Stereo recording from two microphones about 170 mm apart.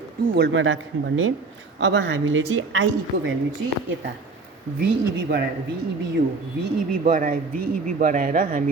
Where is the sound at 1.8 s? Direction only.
90° right.